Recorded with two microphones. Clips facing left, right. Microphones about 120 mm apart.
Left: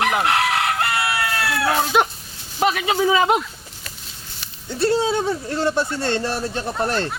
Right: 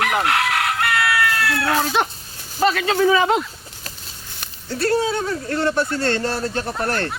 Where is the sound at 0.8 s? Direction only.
25° left (ahead or behind).